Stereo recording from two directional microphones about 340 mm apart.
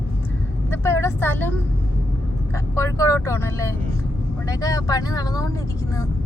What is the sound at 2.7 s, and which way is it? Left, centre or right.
Speech, centre.